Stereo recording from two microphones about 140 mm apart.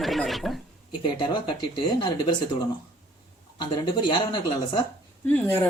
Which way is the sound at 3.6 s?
30° left (ahead or behind).